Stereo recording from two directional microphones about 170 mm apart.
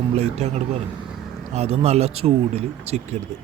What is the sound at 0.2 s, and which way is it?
Speech, 40° right (ahead or behind).